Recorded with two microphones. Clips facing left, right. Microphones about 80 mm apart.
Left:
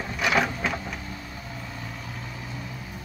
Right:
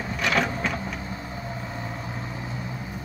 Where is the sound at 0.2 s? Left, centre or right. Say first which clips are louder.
Left 1 dB; centre.